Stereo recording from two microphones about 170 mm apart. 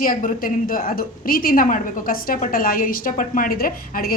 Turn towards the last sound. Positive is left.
turn(degrees=60)  # may be behind; listen again after turning